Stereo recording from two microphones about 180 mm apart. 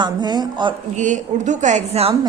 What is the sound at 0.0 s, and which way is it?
Speech, 25° right (ahead or behind).